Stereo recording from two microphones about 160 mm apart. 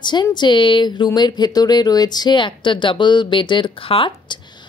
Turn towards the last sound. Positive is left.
turn(degrees=30)  # may be behind; listen again after turning